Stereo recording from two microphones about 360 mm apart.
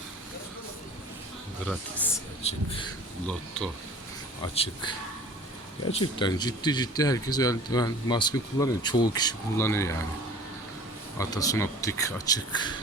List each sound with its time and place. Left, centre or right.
2.1 s speech: centre
3.2 s speech: centre
4.5 s speech: centre
11.2 s speech: centre